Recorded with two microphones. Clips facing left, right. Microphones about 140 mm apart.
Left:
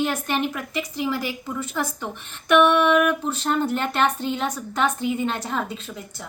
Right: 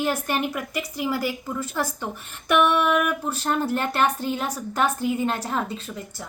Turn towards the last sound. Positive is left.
turn(degrees=0)  # may be behind; listen again after turning